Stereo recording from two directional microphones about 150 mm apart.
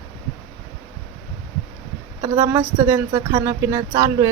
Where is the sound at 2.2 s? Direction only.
20° right (ahead or behind).